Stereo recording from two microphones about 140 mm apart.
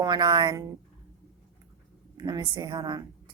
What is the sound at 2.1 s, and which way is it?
Speech, 30° right (ahead or behind).